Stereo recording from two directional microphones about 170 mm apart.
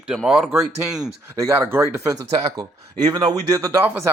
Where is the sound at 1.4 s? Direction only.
15° right (ahead or behind).